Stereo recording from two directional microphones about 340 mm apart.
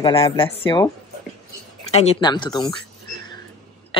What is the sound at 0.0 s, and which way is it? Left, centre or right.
Speech, centre.